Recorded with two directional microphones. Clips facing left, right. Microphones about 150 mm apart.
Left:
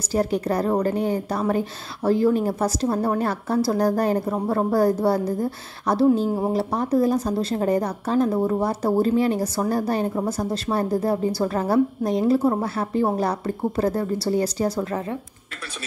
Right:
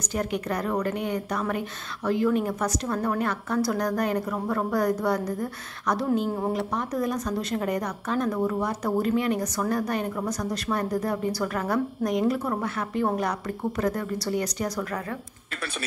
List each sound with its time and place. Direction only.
0.1 s a woman's voice: 35° left (ahead or behind)